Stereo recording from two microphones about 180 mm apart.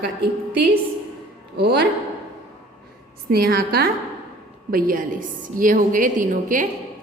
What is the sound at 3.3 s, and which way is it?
A woman's voice, 55° right (ahead or behind).